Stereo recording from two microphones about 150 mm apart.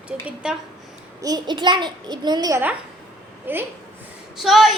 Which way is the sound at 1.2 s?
25° right (ahead or behind).